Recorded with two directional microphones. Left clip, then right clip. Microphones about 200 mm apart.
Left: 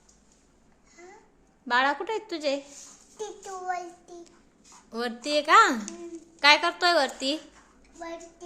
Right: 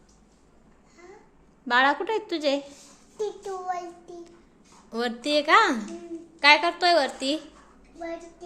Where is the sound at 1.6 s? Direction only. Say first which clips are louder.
Right 3 dB; 5° left (ahead or behind).